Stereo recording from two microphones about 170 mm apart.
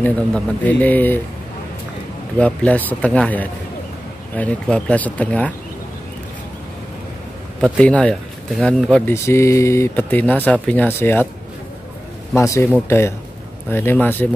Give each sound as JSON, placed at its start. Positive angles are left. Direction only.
{"t": 0.0, "sound": "speech", "side_deg": 10}
{"t": 2.3, "sound": "speech", "side_deg": 5}
{"t": 7.6, "sound": "speech", "side_deg": 5}
{"t": 9.1, "sound": "speech", "side_deg": 15}
{"t": 12.4, "sound": "speech", "side_deg": 15}